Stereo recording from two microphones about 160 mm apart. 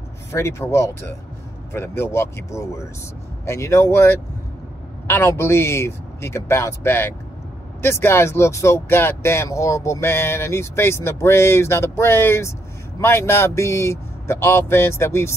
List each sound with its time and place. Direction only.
0.3 s speech: 15° left (ahead or behind)